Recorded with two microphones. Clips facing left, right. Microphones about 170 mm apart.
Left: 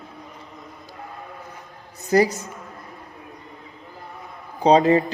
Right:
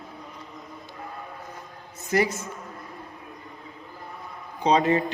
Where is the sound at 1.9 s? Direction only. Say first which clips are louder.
Left 6 dB; 35° left (ahead or behind).